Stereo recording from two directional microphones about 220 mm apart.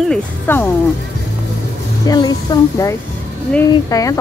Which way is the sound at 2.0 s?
20° left (ahead or behind).